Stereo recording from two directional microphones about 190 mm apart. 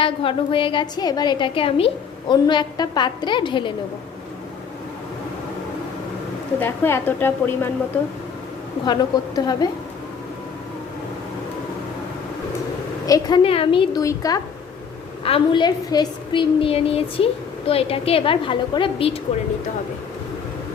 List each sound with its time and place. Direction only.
0.0 s a woman's voice: 30° left (ahead or behind)
6.6 s a woman's voice: 10° left (ahead or behind)
8.9 s a woman's voice: 20° left (ahead or behind)
13.1 s a woman's voice: 20° left (ahead or behind)
14.0 s a woman's voice: 15° left (ahead or behind)